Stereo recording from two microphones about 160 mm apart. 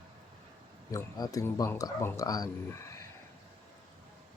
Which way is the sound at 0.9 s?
20° left (ahead or behind).